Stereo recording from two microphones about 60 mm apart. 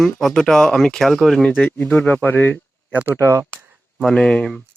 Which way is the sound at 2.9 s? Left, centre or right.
Right.